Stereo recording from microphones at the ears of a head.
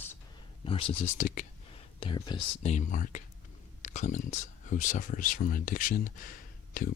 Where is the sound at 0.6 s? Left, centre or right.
Left.